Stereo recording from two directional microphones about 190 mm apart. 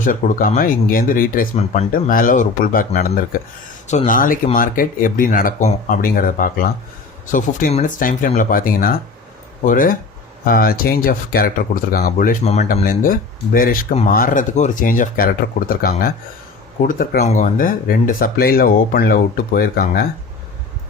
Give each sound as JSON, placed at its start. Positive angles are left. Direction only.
{"t": 0.0, "sound": "speech", "side_deg": 45}
{"t": 1.5, "sound": "speech", "side_deg": 35}
{"t": 1.9, "sound": "speech", "side_deg": 50}
{"t": 3.8, "sound": "speech", "side_deg": 40}
{"t": 12.5, "sound": "speech", "side_deg": 35}